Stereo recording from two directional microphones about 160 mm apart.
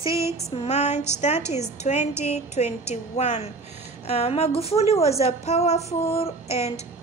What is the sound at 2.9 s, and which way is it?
Speech, 45° left (ahead or behind).